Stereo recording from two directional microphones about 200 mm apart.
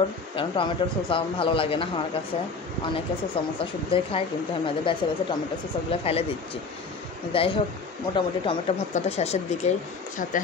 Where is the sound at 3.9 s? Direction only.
25° left (ahead or behind).